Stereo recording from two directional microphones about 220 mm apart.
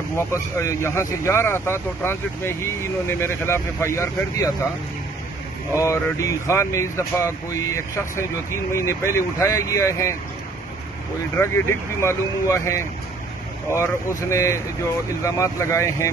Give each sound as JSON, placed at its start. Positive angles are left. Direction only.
{"t": 0.1, "sound": "speech", "side_deg": 10}
{"t": 5.8, "sound": "speech", "side_deg": 15}
{"t": 12.0, "sound": "speech", "side_deg": 10}